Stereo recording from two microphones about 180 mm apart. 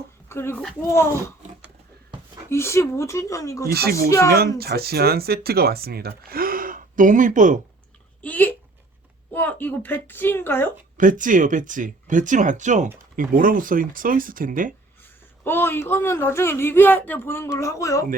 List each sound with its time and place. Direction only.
0.3 s speech: 15° left (ahead or behind)
2.5 s speech: 15° left (ahead or behind)
3.7 s speech: 60° right (ahead or behind)
8.2 s speech: 10° left (ahead or behind)
10.9 s speech: 45° right (ahead or behind)
15.4 s speech: 10° left (ahead or behind)